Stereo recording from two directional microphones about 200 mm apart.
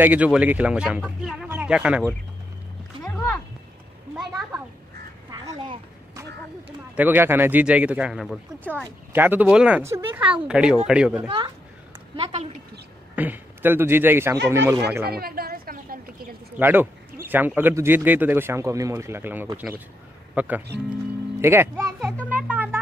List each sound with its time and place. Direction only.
0.0 s speech: 5° right (ahead or behind)
3.0 s a sound: 10° left (ahead or behind)
5.3 s a sound: 20° right (ahead or behind)
7.0 s speech: 10° right (ahead or behind)
9.1 s speech: 10° right (ahead or behind)
11.2 s a woman's voice: 25° right (ahead or behind)
13.1 s speech: 10° right (ahead or behind)
15.0 s a sound: 50° right (ahead or behind)
16.5 s speech: 10° right (ahead or behind)
22.0 s music: 5° left (ahead or behind)
22.3 s music: 10° right (ahead or behind)